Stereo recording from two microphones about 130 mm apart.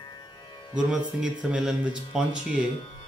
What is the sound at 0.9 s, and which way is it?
Speech, 5° right (ahead or behind).